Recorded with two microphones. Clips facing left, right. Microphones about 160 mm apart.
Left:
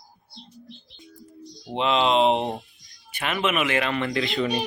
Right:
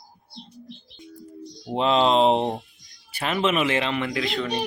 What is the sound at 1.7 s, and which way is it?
Speech, 40° right (ahead or behind).